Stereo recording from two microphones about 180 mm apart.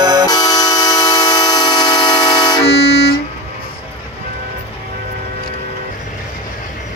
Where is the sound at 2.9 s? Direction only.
60° left (ahead or behind).